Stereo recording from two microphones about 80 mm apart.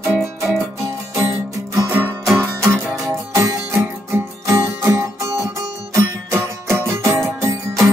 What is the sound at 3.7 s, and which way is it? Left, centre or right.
Music, right.